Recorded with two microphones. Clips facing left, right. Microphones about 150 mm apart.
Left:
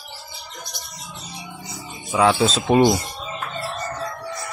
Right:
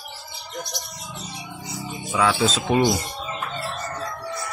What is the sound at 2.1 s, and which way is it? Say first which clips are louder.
Speech: left 3 dB; 30° left (ahead or behind).